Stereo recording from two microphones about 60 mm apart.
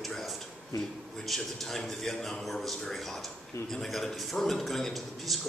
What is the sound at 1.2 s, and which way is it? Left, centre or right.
A man's voice, centre.